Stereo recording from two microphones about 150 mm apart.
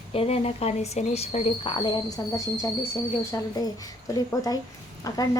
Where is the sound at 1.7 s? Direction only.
30° left (ahead or behind).